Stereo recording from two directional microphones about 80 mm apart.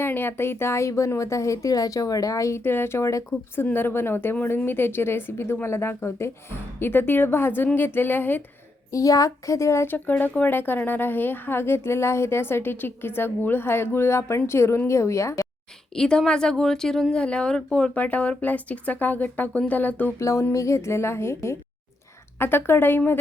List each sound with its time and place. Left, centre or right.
0.0 s speech: left
2.6 s speech: left
3.5 s speech: left
8.9 s speech: left
16.0 s a woman's voice: centre
20.1 s speech: left